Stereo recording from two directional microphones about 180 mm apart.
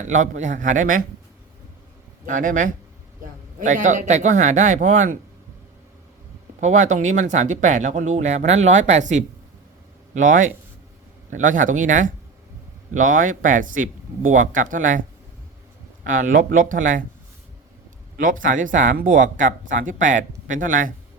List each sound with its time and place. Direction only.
0.1 s speech: 45° right (ahead or behind)
2.2 s speech: 45° right (ahead or behind)
6.6 s speech: 40° right (ahead or behind)
16.0 s speech: 50° right (ahead or behind)
18.2 s speech: 50° right (ahead or behind)